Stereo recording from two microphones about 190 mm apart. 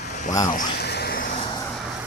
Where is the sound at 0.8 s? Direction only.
60° left (ahead or behind).